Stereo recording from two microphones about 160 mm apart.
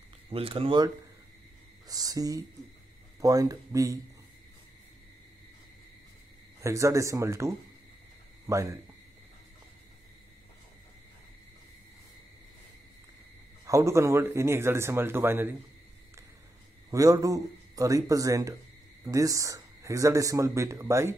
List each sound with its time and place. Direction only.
0.3 s speech: 35° right (ahead or behind)
1.9 s speech: 25° right (ahead or behind)
6.6 s speech: 20° right (ahead or behind)
13.7 s speech: 20° right (ahead or behind)
16.9 s speech: 20° right (ahead or behind)